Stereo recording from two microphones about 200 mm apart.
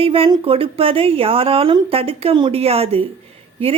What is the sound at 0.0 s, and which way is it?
Speech, 25° right (ahead or behind).